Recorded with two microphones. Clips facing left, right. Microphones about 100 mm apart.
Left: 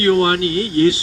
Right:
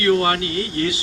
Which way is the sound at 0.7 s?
35° left (ahead or behind).